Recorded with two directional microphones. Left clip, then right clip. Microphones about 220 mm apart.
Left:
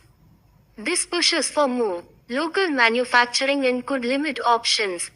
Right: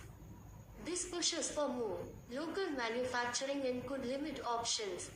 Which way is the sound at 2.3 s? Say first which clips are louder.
Left 19 dB; 35° left (ahead or behind).